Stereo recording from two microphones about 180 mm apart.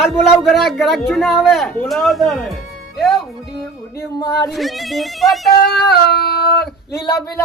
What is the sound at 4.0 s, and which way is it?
Speech, 15° left (ahead or behind).